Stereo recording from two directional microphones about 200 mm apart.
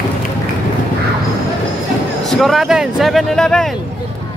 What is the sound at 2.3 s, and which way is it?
Speech, centre (ahead or behind).